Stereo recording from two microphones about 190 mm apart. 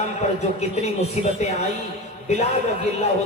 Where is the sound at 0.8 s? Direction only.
35° left (ahead or behind).